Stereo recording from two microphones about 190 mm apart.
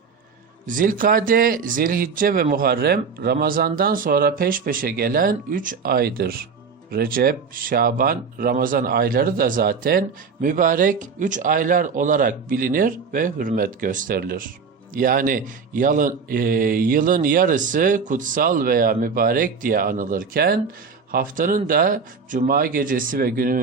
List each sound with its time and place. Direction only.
0.7 s speech: 45° right (ahead or behind)